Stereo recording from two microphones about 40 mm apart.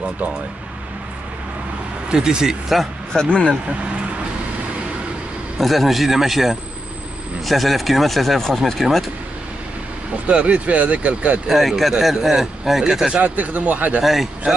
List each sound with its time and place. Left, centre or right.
2.0 s speech: centre
3.1 s speech: centre
5.6 s speech: centre
10.2 s speech: right
11.4 s speech: centre
12.8 s speech: centre
13.1 s speech: right
14.0 s speech: centre